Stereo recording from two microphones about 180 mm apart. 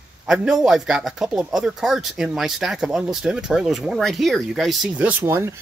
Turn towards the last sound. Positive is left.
turn(degrees=-15)  # may be behind; listen again after turning